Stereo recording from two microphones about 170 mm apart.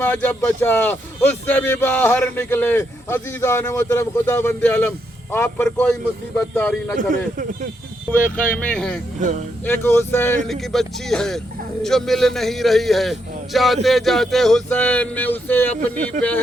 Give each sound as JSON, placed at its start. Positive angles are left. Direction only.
{"t": 0.0, "sound": "a man's voice", "side_deg": 10}
{"t": 8.4, "sound": "a man's voice", "side_deg": 5}
{"t": 10.5, "sound": "a man's voice", "side_deg": 0}
{"t": 16.2, "sound": "speech", "side_deg": -45}